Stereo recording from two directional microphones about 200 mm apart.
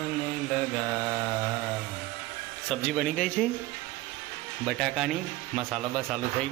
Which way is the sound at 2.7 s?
5° left (ahead or behind).